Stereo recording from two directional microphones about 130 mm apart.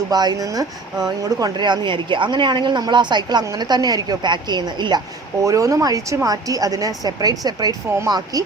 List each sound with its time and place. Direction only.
0.1 s a woman's voice: 30° right (ahead or behind)